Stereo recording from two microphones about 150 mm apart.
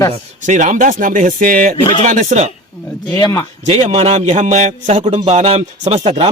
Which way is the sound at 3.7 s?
45° right (ahead or behind).